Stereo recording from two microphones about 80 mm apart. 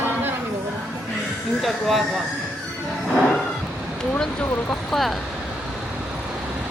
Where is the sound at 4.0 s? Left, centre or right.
Centre.